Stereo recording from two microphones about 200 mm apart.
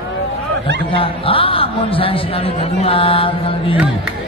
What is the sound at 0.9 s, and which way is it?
Speech, 25° left (ahead or behind).